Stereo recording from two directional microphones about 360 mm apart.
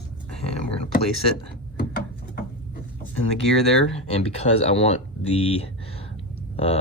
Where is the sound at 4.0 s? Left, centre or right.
Centre.